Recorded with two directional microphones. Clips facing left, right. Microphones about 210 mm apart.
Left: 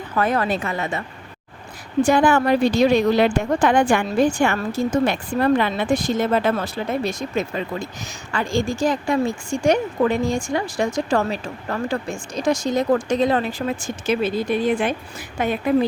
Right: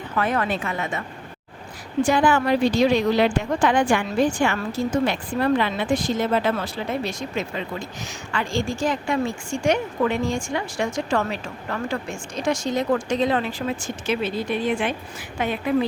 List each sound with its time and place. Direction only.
0.2 s a woman's voice: 40° left (ahead or behind)
2.0 s a woman's voice: 45° left (ahead or behind)